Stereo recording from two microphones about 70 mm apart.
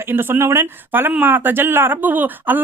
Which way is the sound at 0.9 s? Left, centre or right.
Right.